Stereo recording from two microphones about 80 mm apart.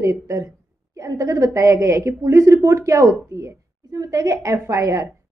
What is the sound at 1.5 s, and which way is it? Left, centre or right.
Speech, right.